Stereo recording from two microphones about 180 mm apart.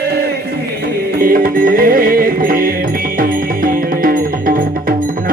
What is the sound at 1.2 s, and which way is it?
Music, 50° right (ahead or behind).